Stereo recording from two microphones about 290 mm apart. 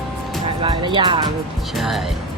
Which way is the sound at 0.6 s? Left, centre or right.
Centre.